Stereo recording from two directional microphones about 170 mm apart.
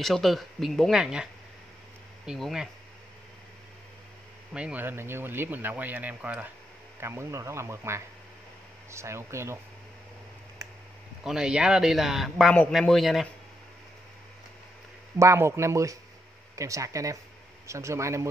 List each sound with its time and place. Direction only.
0.0 s speech: centre (ahead or behind)
4.6 s speech: 10° right (ahead or behind)
11.2 s speech: 5° right (ahead or behind)
15.1 s speech: 15° right (ahead or behind)